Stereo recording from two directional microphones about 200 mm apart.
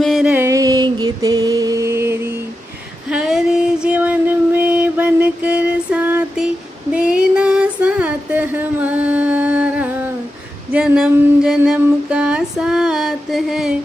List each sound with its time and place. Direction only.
0.0 s music: centre (ahead or behind)
3.1 s female singing: 5° right (ahead or behind)
10.7 s a sound: 5° right (ahead or behind)